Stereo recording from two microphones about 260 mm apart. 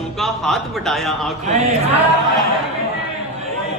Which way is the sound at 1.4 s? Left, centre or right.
Right.